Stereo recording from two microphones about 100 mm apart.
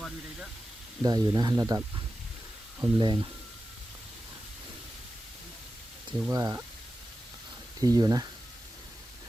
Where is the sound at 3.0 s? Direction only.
50° right (ahead or behind).